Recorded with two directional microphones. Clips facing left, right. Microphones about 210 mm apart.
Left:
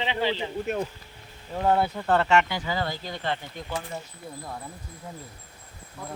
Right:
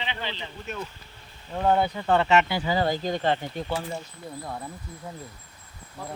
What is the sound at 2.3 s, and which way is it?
Speech, 20° right (ahead or behind).